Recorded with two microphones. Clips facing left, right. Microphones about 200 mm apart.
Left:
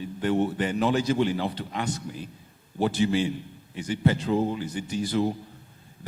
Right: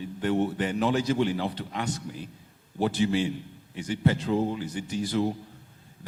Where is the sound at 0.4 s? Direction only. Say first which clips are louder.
Left 1 dB; 10° left (ahead or behind).